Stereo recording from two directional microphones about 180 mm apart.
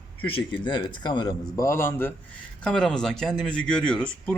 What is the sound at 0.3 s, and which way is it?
A man's voice, 30° left (ahead or behind).